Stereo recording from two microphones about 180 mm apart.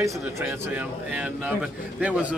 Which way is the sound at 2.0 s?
5° right (ahead or behind).